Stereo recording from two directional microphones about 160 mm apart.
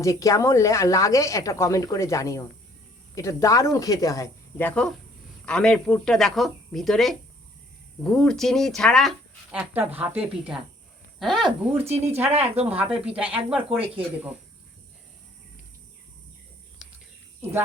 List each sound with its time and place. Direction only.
0.0 s speech: 20° left (ahead or behind); by 9.6 s centre (ahead or behind)
9.6 s speech: 10° right (ahead or behind)
11.9 s speech: 40° right (ahead or behind)
12.7 s speech: 10° right (ahead or behind)